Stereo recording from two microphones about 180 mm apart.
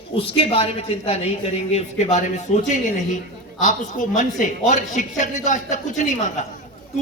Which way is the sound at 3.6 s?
45° left (ahead or behind).